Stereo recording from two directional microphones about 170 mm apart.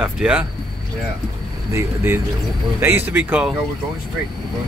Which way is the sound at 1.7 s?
15° right (ahead or behind).